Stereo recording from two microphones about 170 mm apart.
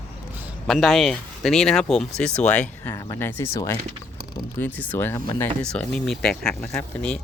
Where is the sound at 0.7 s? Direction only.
Centre (ahead or behind).